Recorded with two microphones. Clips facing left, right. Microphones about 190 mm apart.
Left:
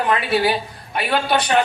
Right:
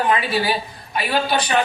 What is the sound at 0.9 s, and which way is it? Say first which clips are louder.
Speech: left 1 dB; 60° left (ahead or behind).